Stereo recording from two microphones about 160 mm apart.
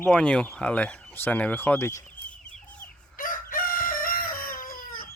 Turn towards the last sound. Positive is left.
turn(degrees=65)  # may be behind; listen again after turning